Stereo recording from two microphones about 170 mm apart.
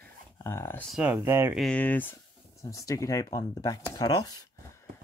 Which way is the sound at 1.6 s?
5° left (ahead or behind).